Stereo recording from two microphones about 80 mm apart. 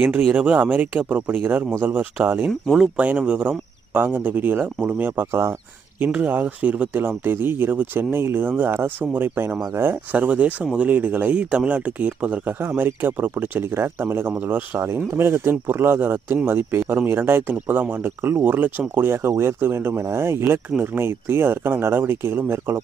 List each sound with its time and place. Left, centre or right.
0.0 s speech: right
2.6 s speech: centre
3.0 s speech: centre